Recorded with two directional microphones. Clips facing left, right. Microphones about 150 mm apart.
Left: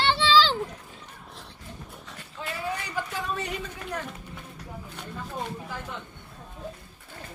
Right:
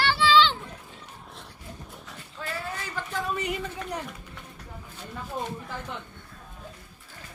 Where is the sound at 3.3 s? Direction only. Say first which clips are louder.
Right 3 dB; 15° right (ahead or behind).